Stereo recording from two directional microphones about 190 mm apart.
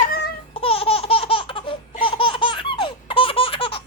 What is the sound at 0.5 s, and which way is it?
Laughter, 30° left (ahead or behind).